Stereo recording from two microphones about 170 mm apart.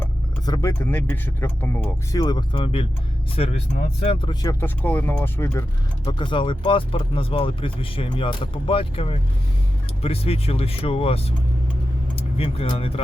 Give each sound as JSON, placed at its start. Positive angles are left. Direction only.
{"t": 0.4, "sound": "speech", "side_deg": 20}
{"t": 2.2, "sound": "speech", "side_deg": 25}
{"t": 4.6, "sound": "speech", "side_deg": 10}
{"t": 6.1, "sound": "speech", "side_deg": 30}